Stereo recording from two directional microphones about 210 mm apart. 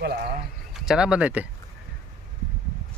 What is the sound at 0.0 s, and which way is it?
Speech, 50° right (ahead or behind).